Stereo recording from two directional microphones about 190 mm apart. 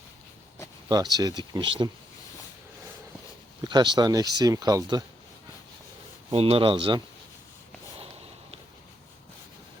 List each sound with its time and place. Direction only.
0.9 s speech: 20° right (ahead or behind)
3.6 s speech: 20° right (ahead or behind)
6.3 s speech: 30° right (ahead or behind)